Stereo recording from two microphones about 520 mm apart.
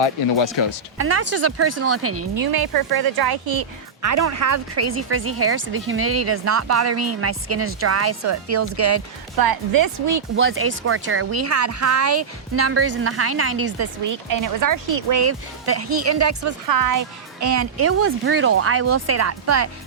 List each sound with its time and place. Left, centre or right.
0.0 s speech: left
0.9 s speech: right
4.0 s speech: right
9.3 s speech: right
10.3 s speech: right
14.1 s speech: right